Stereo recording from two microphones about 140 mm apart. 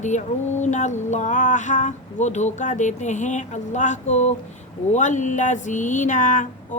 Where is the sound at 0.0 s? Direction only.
60° left (ahead or behind).